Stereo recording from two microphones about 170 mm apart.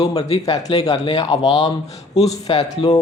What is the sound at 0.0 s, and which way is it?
Speech, 25° left (ahead or behind).